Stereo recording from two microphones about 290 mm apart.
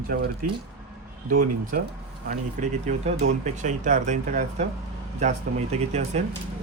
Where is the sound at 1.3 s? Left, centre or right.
Right.